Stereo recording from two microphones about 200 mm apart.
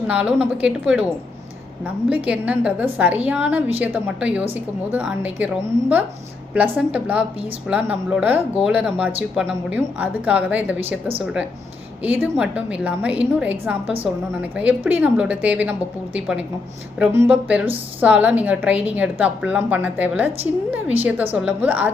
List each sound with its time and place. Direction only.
0.1 s a woman's voice: 5° right (ahead or behind)
2.0 s a woman's voice: 5° right (ahead or behind)
6.5 s a woman's voice: 5° right (ahead or behind)
12.0 s a woman's voice: 10° right (ahead or behind)